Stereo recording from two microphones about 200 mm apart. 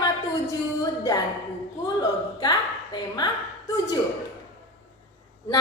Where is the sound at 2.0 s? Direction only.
20° left (ahead or behind).